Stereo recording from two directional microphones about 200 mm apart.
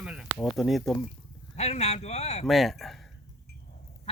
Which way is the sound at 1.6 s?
35° left (ahead or behind).